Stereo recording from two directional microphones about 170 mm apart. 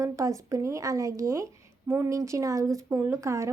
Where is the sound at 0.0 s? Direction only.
20° right (ahead or behind).